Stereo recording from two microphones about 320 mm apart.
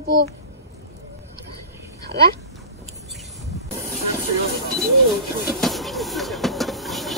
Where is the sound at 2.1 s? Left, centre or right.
Right.